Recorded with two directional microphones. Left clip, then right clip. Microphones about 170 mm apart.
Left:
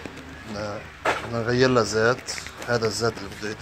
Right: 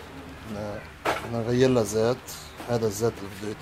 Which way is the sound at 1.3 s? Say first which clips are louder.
Left 2 dB; 15° right (ahead or behind).